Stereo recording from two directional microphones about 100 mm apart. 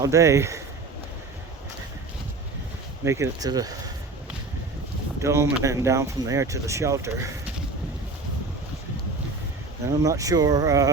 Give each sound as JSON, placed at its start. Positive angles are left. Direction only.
{"t": 0.0, "sound": "speech", "side_deg": -30}
{"t": 3.0, "sound": "speech", "side_deg": -30}
{"t": 5.2, "sound": "speech", "side_deg": -30}
{"t": 10.0, "sound": "speech", "side_deg": -35}